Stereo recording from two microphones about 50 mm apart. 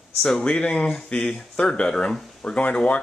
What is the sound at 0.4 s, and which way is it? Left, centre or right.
Speech, left.